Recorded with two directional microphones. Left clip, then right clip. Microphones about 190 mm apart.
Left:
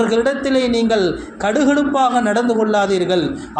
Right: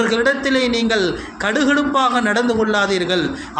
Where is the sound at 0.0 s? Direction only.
10° left (ahead or behind).